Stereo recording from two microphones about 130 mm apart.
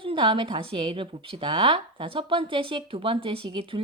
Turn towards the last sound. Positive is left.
turn(degrees=-40)  # may be behind; listen again after turning